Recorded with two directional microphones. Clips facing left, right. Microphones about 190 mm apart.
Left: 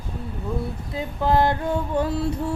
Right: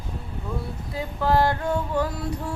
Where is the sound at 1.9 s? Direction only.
25° left (ahead or behind).